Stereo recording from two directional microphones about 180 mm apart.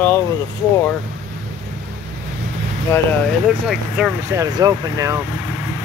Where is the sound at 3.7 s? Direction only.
5° right (ahead or behind).